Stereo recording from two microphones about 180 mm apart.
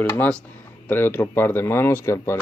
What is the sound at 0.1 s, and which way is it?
Speech, 10° left (ahead or behind).